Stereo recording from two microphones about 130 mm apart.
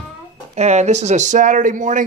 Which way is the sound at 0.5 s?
60° right (ahead or behind).